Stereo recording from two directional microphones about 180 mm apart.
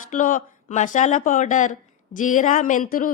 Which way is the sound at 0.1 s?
45° left (ahead or behind).